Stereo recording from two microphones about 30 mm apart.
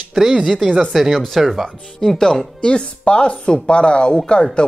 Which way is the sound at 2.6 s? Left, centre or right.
Left.